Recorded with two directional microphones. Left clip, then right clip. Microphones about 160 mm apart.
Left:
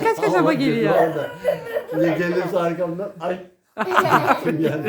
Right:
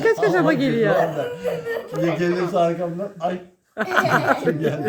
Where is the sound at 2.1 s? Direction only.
25° left (ahead or behind).